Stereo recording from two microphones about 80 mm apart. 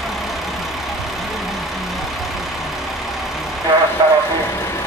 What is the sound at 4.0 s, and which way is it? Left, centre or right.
Vehicle, right.